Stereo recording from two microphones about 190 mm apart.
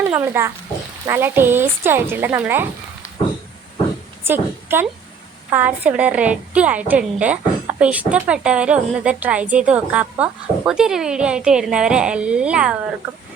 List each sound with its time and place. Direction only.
0.0 s a child's voice: 10° right (ahead or behind)
4.2 s a woman's voice: 10° right (ahead or behind)